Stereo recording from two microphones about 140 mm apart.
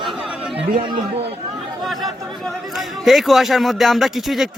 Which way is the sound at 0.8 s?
35° right (ahead or behind).